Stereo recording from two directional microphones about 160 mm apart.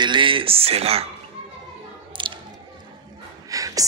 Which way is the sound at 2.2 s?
30° right (ahead or behind).